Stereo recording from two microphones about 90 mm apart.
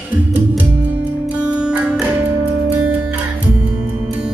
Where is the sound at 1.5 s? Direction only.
15° right (ahead or behind).